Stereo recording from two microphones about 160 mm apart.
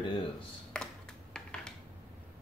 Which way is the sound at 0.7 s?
5° left (ahead or behind).